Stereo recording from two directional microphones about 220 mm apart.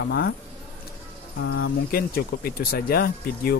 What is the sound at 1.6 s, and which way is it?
Speech, 45° left (ahead or behind).